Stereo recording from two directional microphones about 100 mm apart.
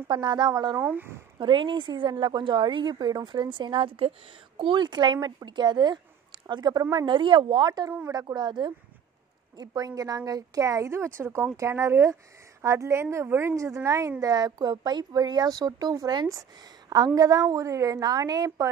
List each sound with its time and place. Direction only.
0.1 s a woman's voice: 50° right (ahead or behind)
0.7 s a woman's voice: 20° right (ahead or behind)
1.4 s a woman's voice: 55° right (ahead or behind)